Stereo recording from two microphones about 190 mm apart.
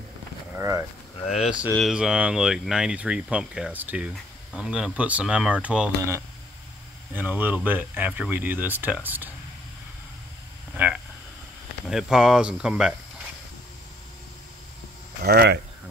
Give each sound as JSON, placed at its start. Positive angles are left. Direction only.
{"t": 0.6, "sound": "speech", "side_deg": -15}
{"t": 1.2, "sound": "speech", "side_deg": 35}
{"t": 1.7, "sound": "speech", "side_deg": 0}
{"t": 7.2, "sound": "speech", "side_deg": -10}
{"t": 10.7, "sound": "speech", "side_deg": -5}
{"t": 15.2, "sound": "speech", "side_deg": -55}